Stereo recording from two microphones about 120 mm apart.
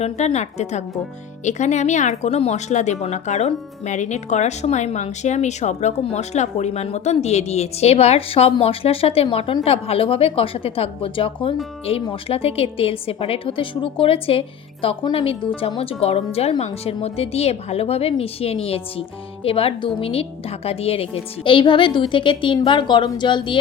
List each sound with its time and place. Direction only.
0.0 s a woman's voice: 65° left (ahead or behind); by 23.6 s 40° left (ahead or behind)